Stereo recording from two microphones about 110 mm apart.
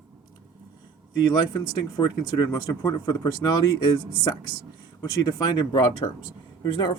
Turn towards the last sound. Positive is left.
turn(degrees=40)  # may be behind; listen again after turning